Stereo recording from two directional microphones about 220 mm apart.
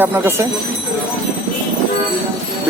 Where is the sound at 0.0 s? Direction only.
10° right (ahead or behind).